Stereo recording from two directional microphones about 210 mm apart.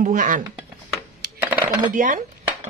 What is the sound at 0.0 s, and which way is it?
Speech, 40° right (ahead or behind).